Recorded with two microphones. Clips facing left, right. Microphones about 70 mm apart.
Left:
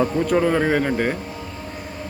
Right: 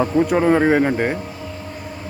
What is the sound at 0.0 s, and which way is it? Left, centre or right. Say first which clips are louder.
Speech: right 2 dB; centre.